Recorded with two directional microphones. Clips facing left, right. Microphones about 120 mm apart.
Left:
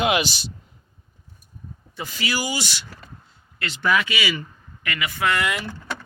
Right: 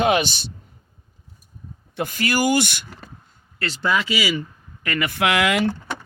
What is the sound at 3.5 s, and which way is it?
Speech, 35° right (ahead or behind).